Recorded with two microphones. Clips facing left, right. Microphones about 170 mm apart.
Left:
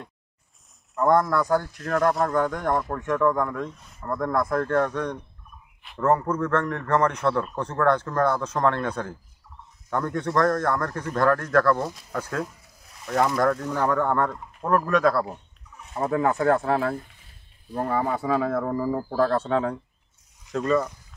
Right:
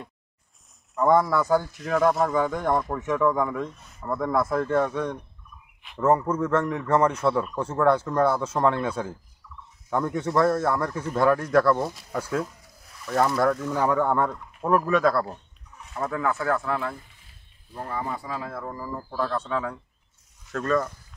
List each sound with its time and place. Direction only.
0.9 s a man's voice: centre (ahead or behind)
9.4 s turkey: 45° left (ahead or behind)
9.8 s a man's voice: 10° right (ahead or behind)
15.9 s speech: 30° left (ahead or behind)
17.7 s speech: 70° left (ahead or behind); by 19.6 s 50° left (ahead or behind)
20.5 s speech: 10° left (ahead or behind)